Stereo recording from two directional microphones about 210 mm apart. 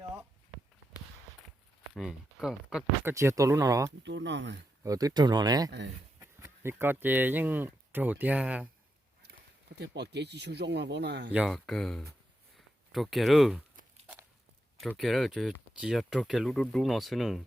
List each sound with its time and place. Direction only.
1.9 s speech: centre (ahead or behind)
4.0 s speech: 60° right (ahead or behind)
4.8 s speech: 15° right (ahead or behind)
9.7 s speech: 55° right (ahead or behind)
11.3 s speech: 5° right (ahead or behind)
12.5 s a sound: centre (ahead or behind)
14.8 s speech: centre (ahead or behind)